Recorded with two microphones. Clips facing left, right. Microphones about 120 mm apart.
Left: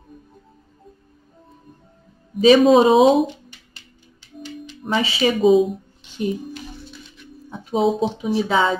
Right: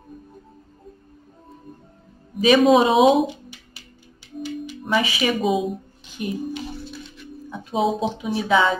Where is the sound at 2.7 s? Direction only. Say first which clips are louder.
Left 3 dB; 30° left (ahead or behind).